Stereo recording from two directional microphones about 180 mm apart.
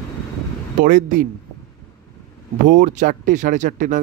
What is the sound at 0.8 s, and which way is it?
Speech, 50° right (ahead or behind).